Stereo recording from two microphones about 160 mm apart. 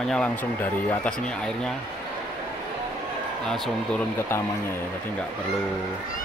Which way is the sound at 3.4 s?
Centre (ahead or behind).